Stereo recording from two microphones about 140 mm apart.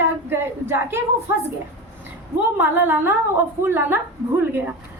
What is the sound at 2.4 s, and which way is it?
A woman's voice, 15° right (ahead or behind).